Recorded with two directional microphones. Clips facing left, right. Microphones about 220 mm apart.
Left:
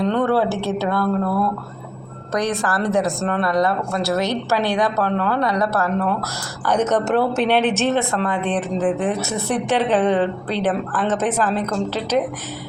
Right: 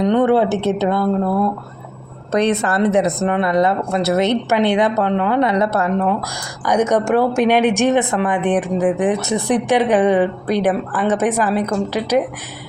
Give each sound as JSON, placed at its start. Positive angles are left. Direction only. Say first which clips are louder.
{"t": 0.0, "sound": "a woman's voice", "louder": "right 4 dB", "side_deg": -20}